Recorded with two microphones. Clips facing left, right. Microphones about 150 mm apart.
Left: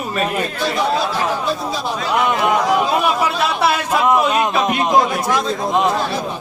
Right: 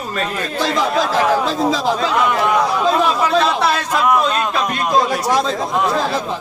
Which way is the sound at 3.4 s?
10° left (ahead or behind).